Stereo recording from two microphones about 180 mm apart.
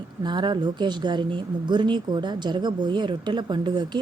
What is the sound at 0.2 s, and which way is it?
Speech, 25° right (ahead or behind).